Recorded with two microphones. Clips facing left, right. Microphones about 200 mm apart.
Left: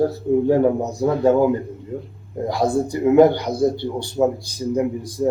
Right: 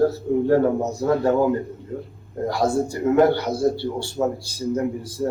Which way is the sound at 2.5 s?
15° left (ahead or behind).